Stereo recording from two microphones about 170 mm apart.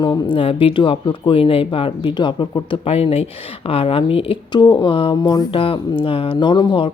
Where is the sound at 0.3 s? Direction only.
30° left (ahead or behind).